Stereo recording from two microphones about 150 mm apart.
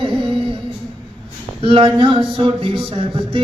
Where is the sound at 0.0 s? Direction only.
35° right (ahead or behind).